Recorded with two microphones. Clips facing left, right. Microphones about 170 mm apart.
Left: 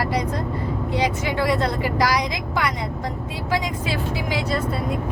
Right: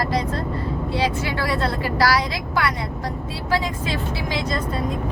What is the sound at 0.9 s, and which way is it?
A woman's voice, 15° left (ahead or behind).